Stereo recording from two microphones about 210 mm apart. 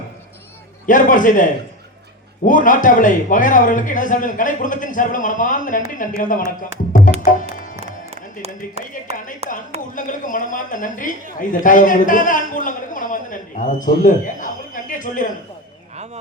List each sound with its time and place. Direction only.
0.9 s a man's voice: 40° left (ahead or behind)
2.5 s a man's voice: 40° left (ahead or behind)
7.8 s a sound: 30° right (ahead or behind)
9.4 s speech: 30° right (ahead or behind)
9.9 s a man's voice: 40° left (ahead or behind)